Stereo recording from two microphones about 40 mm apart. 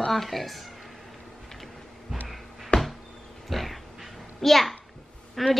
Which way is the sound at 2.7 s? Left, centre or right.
Left.